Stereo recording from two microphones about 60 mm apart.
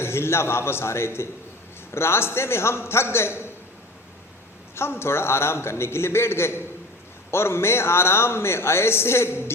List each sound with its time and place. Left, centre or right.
0.0 s a man's voice: left
4.7 s a man's voice: left